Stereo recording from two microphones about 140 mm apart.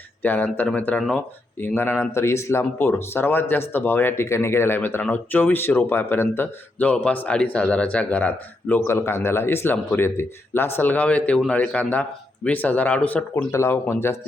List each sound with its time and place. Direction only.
0.2 s speech: 10° left (ahead or behind)